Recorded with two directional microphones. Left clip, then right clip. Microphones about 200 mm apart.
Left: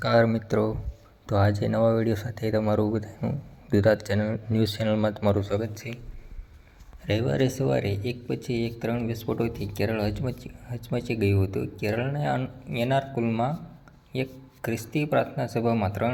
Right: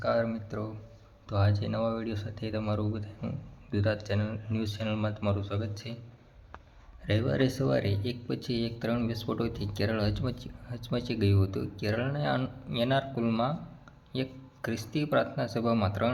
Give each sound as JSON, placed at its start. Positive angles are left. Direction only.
{"t": 0.0, "sound": "speech", "side_deg": 35}
{"t": 7.0, "sound": "speech", "side_deg": 0}